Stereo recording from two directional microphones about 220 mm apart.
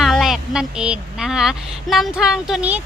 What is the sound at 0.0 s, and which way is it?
Speech, centre (ahead or behind).